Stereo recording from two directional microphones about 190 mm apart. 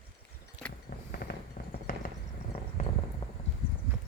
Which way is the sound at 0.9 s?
50° left (ahead or behind).